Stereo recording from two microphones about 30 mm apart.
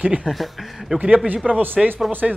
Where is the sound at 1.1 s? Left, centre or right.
Right.